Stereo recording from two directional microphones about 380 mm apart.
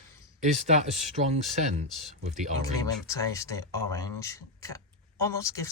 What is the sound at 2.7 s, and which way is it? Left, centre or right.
Speech, centre.